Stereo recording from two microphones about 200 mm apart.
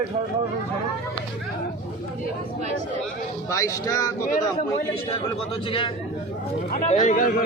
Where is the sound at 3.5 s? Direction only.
15° left (ahead or behind).